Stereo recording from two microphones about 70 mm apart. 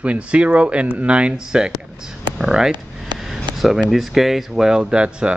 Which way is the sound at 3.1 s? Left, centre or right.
Right.